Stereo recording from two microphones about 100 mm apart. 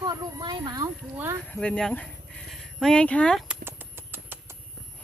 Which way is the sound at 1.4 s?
10° left (ahead or behind).